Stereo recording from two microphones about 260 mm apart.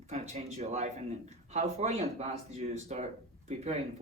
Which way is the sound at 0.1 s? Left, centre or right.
Right.